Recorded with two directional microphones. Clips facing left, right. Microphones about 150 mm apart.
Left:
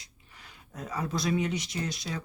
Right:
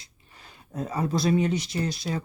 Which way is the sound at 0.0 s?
30° right (ahead or behind).